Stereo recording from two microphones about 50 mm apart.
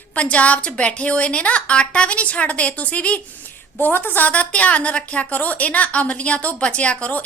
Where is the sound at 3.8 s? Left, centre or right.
Left.